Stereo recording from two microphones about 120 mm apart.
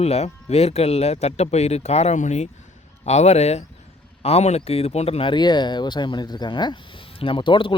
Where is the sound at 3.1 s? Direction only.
65° left (ahead or behind).